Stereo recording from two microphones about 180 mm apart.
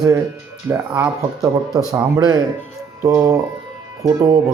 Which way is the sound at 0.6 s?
10° right (ahead or behind).